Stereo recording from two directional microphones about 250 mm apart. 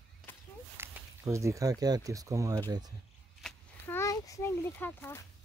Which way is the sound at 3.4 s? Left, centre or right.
Centre.